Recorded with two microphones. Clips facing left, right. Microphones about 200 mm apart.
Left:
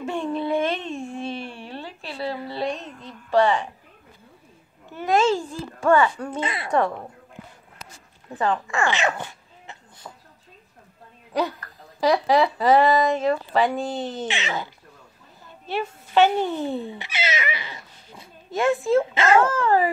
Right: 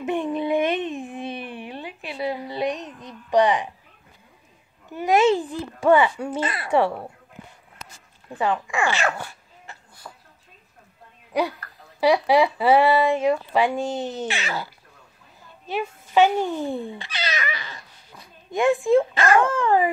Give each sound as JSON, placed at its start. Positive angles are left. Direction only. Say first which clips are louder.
{"t": 0.0, "sound": "a sound", "louder": "right 2 dB", "side_deg": -20}
{"t": 4.9, "sound": "speech", "louder": "right 2 dB", "side_deg": -15}
{"t": 8.3, "sound": "speech", "louder": "even", "side_deg": -10}
{"t": 9.2, "sound": "a sound", "louder": "left 1 dB", "side_deg": 20}
{"t": 12.0, "sound": "speech", "louder": "right 1 dB", "side_deg": -10}
{"t": 14.2, "sound": "speech", "louder": "even", "side_deg": 20}
{"t": 15.7, "sound": "speech", "louder": "even", "side_deg": -10}
{"t": 17.3, "sound": "dog", "louder": "left 1 dB", "side_deg": 20}
{"t": 18.5, "sound": "speech", "louder": "right 2 dB", "side_deg": -15}
{"t": 19.1, "sound": "speech", "louder": "left 1 dB", "side_deg": 25}
{"t": 19.5, "sound": "speech", "louder": "even", "side_deg": -15}